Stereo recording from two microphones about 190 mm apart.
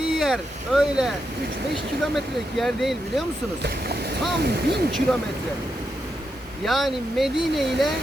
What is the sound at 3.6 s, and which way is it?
Speech, 55° right (ahead or behind).